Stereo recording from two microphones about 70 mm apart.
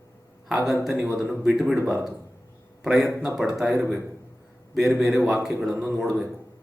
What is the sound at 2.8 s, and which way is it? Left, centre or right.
A man's voice, centre.